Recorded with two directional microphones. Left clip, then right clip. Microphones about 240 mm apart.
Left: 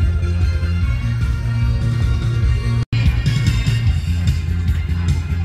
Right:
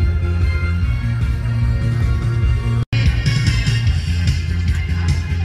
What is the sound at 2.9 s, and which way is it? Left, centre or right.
Music, left.